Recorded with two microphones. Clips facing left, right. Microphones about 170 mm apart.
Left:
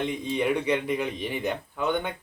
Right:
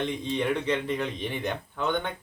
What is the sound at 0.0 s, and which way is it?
Speech, 10° left (ahead or behind).